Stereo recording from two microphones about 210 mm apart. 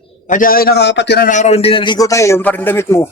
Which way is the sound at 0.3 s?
40° left (ahead or behind).